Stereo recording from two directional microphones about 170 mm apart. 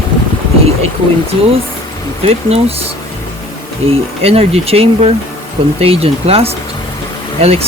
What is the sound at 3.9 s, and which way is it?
Speech, 35° right (ahead or behind).